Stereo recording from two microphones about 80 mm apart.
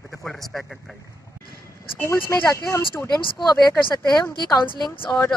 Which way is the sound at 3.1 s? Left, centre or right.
Left.